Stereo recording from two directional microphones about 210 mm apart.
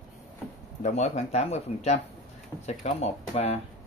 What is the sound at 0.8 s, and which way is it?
Speech, 30° left (ahead or behind).